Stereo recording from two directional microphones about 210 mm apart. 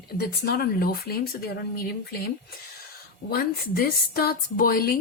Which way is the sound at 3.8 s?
45° left (ahead or behind).